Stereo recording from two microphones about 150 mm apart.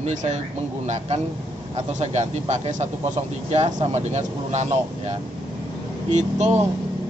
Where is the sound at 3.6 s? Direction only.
30° right (ahead or behind).